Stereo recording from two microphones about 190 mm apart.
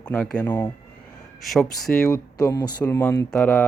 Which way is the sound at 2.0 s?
15° left (ahead or behind).